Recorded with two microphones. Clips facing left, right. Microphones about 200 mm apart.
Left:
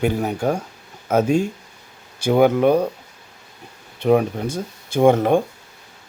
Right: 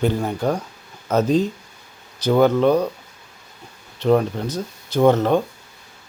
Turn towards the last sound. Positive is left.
turn(degrees=10)  # may be behind; listen again after turning